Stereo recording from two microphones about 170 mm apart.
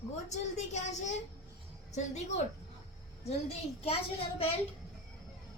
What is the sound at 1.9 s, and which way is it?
Speech, 40° left (ahead or behind).